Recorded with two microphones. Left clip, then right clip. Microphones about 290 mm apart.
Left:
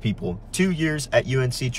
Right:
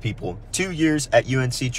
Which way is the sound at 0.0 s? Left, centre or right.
Centre.